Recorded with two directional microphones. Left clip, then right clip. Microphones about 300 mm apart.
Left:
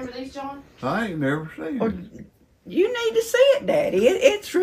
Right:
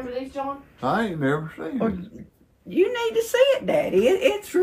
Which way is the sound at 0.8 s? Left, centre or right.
Centre.